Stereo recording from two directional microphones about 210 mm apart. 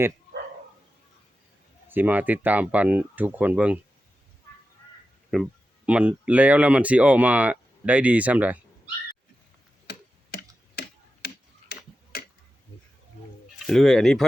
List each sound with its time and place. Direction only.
1.9 s speech: 10° right (ahead or behind)
5.3 s speech: 5° right (ahead or behind)
9.9 s tick-tock: 50° left (ahead or behind)
13.7 s speech: centre (ahead or behind)